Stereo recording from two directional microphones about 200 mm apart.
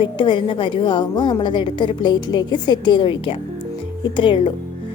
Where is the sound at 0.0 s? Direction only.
25° left (ahead or behind).